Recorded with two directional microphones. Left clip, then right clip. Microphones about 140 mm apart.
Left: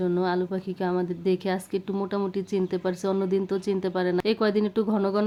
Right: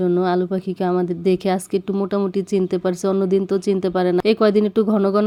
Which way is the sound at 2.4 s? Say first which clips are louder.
Right 7 dB; 40° right (ahead or behind).